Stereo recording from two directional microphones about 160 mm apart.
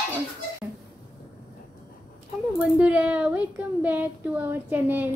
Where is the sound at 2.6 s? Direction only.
10° right (ahead or behind).